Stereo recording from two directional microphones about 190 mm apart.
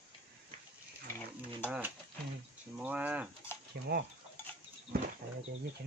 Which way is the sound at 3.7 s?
55° right (ahead or behind).